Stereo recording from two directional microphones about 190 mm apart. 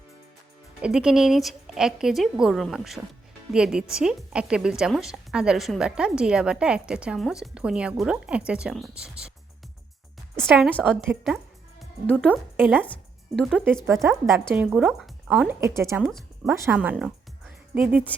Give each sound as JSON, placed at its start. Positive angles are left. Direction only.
{"t": 0.8, "sound": "a woman's voice", "side_deg": -5}
{"t": 10.3, "sound": "a woman's voice", "side_deg": -5}
{"t": 13.8, "sound": "speech", "side_deg": -15}
{"t": 15.6, "sound": "speech", "side_deg": -15}